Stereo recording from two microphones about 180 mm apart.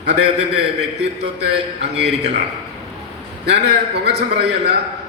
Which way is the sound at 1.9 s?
70° right (ahead or behind).